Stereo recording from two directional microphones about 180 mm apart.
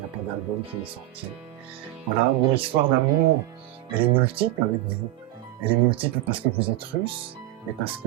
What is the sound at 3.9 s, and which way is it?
Speech, 30° right (ahead or behind).